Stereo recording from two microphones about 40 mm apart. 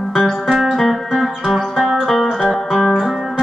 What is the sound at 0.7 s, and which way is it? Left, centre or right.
Music, centre.